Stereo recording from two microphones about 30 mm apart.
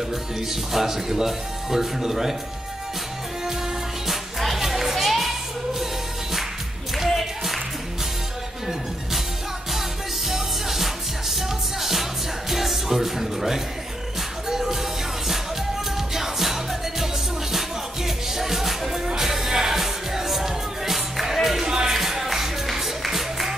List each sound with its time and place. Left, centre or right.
0.7 s speech: centre
4.1 s music: centre
4.9 s children playing: centre
7.1 s music: centre
9.7 s music: centre
21.6 s music: right
21.9 s music: centre